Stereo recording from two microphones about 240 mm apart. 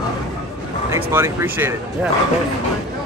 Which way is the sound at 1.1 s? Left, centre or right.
Centre.